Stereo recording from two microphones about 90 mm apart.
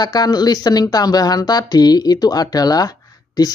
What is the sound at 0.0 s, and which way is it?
Speech, 45° left (ahead or behind).